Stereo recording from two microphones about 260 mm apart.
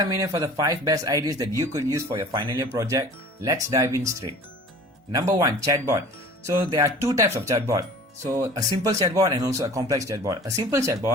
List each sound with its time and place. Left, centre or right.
0.0 s speech: centre
5.1 s speech: centre